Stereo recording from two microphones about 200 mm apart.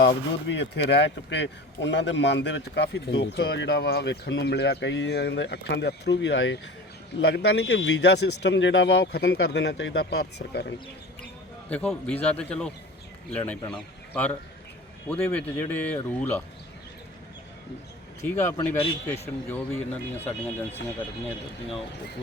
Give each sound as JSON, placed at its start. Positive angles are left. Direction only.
{"t": 0.0, "sound": "speech", "side_deg": 60}
{"t": 11.7, "sound": "speech", "side_deg": 5}
{"t": 18.2, "sound": "speech", "side_deg": 10}